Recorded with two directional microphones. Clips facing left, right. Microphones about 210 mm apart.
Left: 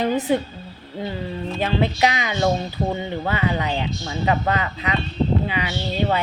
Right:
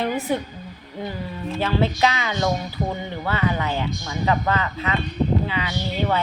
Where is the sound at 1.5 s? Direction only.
15° left (ahead or behind).